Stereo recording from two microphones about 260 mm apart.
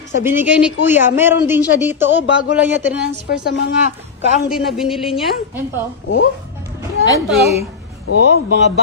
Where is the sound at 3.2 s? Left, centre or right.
Left.